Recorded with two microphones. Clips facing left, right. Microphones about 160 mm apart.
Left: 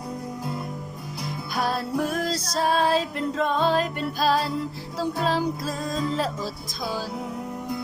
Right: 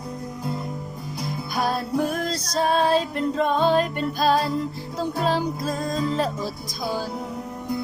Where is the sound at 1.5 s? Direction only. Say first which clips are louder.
Right 1 dB; centre (ahead or behind).